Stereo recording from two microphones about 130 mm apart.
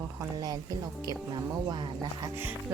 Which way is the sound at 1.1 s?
30° right (ahead or behind).